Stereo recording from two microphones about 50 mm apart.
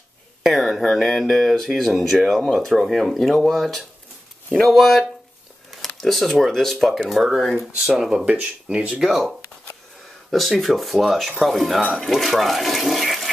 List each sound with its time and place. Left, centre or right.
0.4 s speech: centre
8.3 s speech: right
9.0 s speech: centre
10.3 s speech: centre